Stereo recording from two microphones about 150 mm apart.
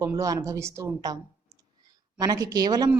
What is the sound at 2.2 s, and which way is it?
Speech, 25° right (ahead or behind).